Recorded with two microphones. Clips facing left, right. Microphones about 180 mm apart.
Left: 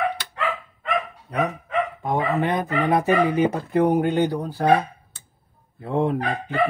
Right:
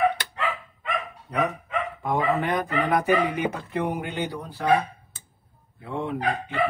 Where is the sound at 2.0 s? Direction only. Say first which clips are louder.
Even; 20° left (ahead or behind); by 4.7 s 40° left (ahead or behind).